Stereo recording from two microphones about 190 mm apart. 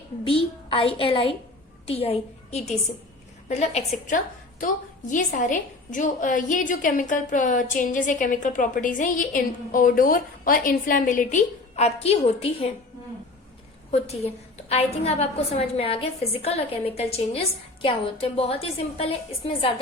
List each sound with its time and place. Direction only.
0.3 s a woman's voice: 30° left (ahead or behind)
14.7 s a woman's voice: 30° left (ahead or behind)